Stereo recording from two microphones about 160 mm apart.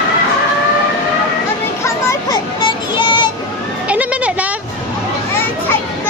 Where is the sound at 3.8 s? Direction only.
10° right (ahead or behind).